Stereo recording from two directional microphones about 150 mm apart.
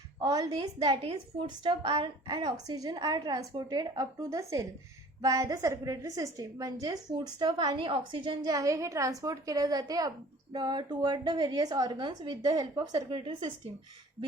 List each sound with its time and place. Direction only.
0.2 s a woman's voice: 25° right (ahead or behind)